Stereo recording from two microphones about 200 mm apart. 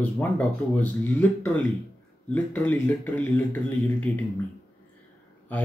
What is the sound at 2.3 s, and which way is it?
Speech, 10° left (ahead or behind).